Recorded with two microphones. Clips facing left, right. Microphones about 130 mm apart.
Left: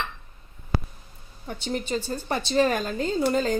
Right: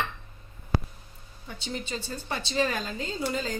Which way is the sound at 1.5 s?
50° left (ahead or behind).